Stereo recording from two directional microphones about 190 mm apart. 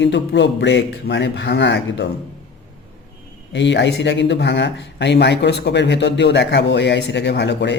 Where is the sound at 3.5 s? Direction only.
70° left (ahead or behind).